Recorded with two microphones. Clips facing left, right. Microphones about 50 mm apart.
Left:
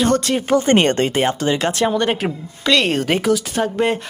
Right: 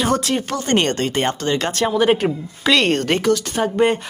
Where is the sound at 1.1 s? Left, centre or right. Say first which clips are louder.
Left 2 dB; centre.